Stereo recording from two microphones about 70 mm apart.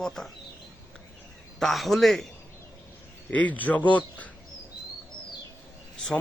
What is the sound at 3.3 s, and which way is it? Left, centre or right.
Speech, left.